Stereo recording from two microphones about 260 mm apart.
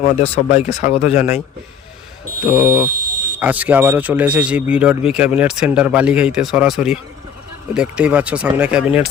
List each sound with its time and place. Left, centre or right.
0.2 s speech: left
2.5 s speech: centre